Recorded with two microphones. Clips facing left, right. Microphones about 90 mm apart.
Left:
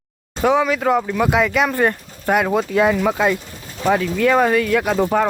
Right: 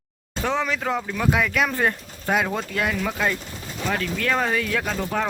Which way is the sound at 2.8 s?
20° left (ahead or behind).